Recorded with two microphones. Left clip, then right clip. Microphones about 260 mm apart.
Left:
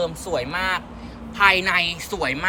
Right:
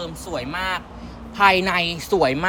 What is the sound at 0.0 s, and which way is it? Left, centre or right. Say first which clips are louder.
A woman's voice: left 4 dB; centre.